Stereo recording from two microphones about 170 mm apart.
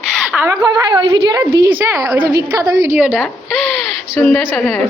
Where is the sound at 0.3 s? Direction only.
15° right (ahead or behind).